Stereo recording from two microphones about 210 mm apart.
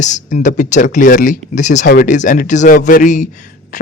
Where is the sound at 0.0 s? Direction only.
35° left (ahead or behind).